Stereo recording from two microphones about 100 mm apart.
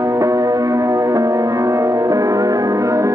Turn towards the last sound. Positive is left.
turn(degrees=-30)  # may be behind; listen again after turning